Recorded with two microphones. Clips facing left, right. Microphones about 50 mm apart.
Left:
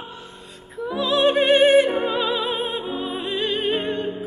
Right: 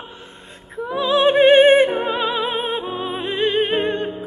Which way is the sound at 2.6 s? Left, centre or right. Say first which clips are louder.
Right 2 dB; right.